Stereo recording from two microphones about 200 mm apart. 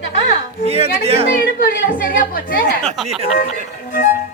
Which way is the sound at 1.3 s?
45° left (ahead or behind).